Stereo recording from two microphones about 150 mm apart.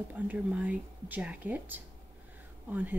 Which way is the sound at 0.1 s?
10° right (ahead or behind).